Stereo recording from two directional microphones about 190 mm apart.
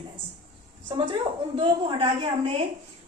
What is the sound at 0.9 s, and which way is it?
A woman's voice, 25° right (ahead or behind).